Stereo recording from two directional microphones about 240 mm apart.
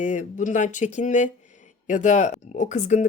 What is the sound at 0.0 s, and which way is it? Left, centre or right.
Speech, left.